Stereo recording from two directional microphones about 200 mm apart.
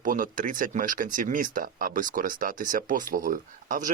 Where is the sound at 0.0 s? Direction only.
40° right (ahead or behind).